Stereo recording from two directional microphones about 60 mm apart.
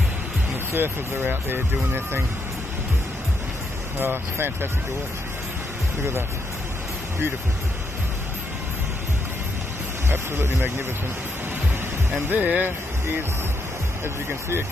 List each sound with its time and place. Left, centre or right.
0.7 s speech: right
4.0 s speech: right
10.0 s speech: right
12.3 s speech: right